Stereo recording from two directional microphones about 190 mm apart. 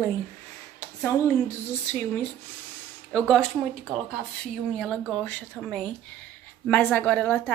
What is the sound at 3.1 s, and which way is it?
A woman's voice, 5° left (ahead or behind).